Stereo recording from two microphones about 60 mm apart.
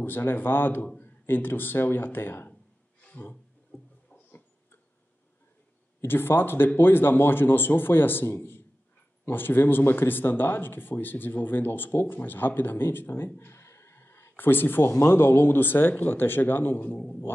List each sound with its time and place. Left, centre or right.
0.0 s speech: left
3.7 s a sound: centre
6.0 s speech: left